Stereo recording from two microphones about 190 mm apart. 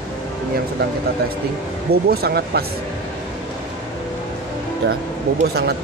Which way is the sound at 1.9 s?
55° right (ahead or behind).